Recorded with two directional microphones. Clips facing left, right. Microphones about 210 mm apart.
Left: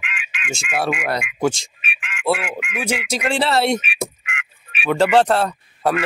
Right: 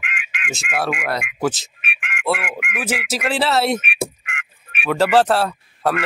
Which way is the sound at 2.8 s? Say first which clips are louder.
Left 1 dB; 5° right (ahead or behind).